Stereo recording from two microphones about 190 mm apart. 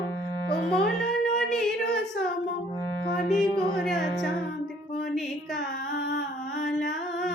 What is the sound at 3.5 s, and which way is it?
Music, 15° right (ahead or behind).